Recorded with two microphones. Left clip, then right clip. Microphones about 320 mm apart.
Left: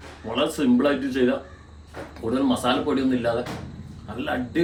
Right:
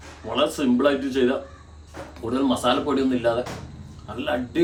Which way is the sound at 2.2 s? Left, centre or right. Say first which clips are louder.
Left 1 dB; centre.